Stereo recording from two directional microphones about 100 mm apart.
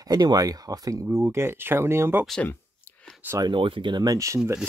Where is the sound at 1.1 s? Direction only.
25° right (ahead or behind).